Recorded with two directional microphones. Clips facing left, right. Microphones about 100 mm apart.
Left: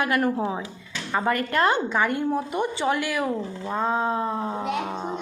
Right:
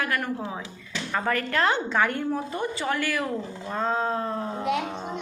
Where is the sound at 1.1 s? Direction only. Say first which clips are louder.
Left 3 dB; 10° left (ahead or behind).